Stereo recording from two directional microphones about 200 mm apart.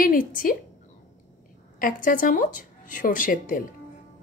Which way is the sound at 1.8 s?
40° left (ahead or behind).